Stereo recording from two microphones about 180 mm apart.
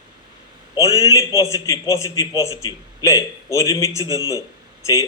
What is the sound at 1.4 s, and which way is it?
A man's voice, 15° left (ahead or behind).